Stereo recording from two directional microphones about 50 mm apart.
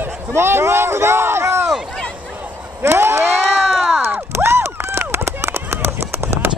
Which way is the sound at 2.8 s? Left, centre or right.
Right.